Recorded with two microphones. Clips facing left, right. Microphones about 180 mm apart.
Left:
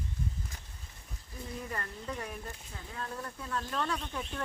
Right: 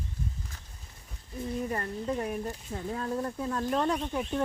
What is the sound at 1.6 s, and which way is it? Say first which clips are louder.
Speech: right 8 dB; 30° right (ahead or behind).